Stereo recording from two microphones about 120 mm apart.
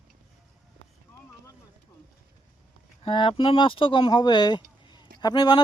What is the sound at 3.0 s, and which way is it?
Speech, 45° left (ahead or behind).